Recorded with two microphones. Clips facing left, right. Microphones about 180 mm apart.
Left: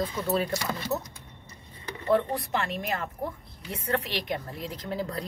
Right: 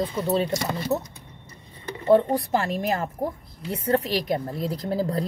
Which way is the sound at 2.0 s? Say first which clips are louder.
Right 6 dB; 30° right (ahead or behind).